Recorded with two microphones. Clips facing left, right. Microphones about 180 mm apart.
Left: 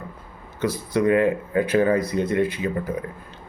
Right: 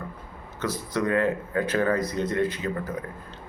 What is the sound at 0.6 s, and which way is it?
A man's voice, 10° left (ahead or behind).